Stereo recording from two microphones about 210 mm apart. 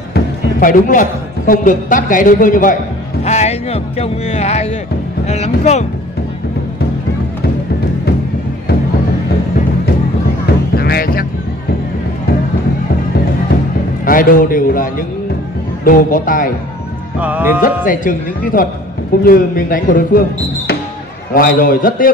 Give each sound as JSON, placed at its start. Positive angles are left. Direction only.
{"t": 0.1, "sound": "a man's voice", "side_deg": 40}
{"t": 3.3, "sound": "music", "side_deg": 30}
{"t": 5.2, "sound": "speech", "side_deg": 30}
{"t": 10.8, "sound": "music", "side_deg": 45}
{"t": 14.0, "sound": "a man's voice", "side_deg": 40}
{"t": 17.2, "sound": "music", "side_deg": -10}
{"t": 17.8, "sound": "a man's voice", "side_deg": 40}